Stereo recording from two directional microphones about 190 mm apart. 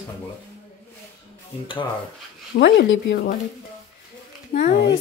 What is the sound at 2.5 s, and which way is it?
Speech, 70° left (ahead or behind).